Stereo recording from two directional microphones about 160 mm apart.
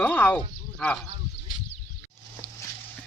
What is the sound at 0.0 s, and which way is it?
Speech, 10° left (ahead or behind).